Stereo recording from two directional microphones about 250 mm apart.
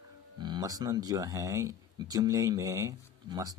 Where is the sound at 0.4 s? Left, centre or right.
Centre.